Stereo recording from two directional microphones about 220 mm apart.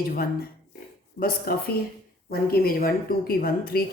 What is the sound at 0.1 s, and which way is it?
A woman's voice, 45° left (ahead or behind).